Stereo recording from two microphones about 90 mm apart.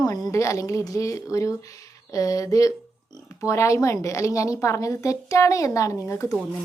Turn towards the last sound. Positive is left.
turn(degrees=35)  # may be behind; listen again after turning